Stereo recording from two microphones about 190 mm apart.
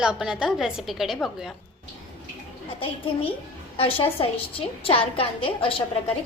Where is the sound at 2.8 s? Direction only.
30° left (ahead or behind).